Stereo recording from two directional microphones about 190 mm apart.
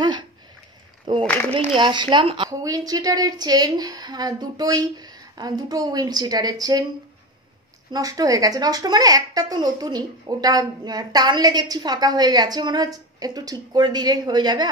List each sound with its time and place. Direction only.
1.2 s speech: 10° left (ahead or behind)
1.5 s speech: 30° right (ahead or behind)
7.9 s speech: 20° right (ahead or behind)